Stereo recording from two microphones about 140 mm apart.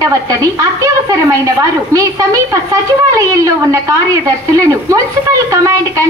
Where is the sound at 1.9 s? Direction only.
20° right (ahead or behind).